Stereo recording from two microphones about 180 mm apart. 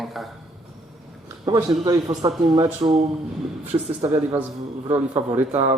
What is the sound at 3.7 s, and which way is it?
Speech, 35° right (ahead or behind).